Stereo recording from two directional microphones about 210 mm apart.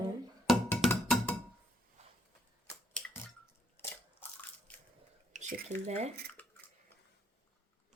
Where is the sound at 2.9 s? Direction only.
10° left (ahead or behind).